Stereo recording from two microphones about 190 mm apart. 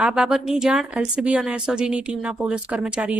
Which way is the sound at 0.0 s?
5° right (ahead or behind).